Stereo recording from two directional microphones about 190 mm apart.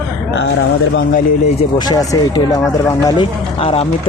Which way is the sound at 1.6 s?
20° left (ahead or behind).